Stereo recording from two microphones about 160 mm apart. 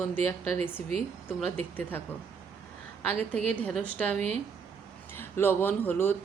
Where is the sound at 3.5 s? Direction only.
5° left (ahead or behind).